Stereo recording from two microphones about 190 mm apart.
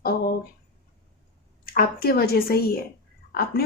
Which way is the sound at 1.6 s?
50° left (ahead or behind).